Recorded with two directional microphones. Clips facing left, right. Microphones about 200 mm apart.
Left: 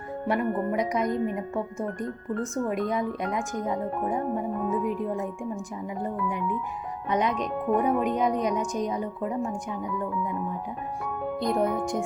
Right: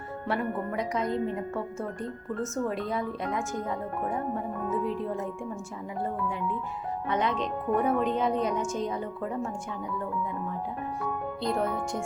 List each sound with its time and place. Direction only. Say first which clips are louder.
0.7 s speech: left 3 dB; 15° left (ahead or behind)
11.0 s speech: left 3 dB; 15° left (ahead or behind)